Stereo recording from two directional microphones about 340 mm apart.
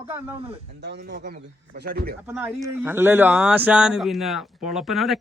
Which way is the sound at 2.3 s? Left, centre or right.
Centre.